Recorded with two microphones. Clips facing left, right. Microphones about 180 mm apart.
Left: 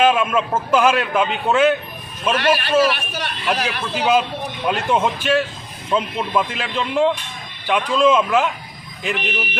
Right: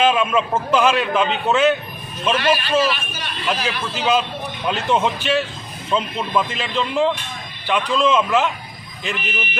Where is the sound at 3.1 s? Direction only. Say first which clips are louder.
Left 2 dB; 65° left (ahead or behind).